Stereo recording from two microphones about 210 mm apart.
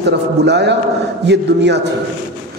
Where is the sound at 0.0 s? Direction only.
55° right (ahead or behind).